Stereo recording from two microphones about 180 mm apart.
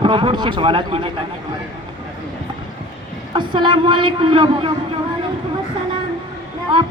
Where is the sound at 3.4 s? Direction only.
25° right (ahead or behind).